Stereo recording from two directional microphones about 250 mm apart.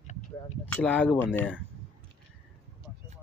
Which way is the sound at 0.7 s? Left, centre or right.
Centre.